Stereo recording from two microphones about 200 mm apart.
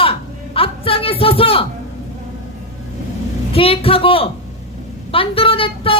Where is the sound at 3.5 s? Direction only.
30° left (ahead or behind).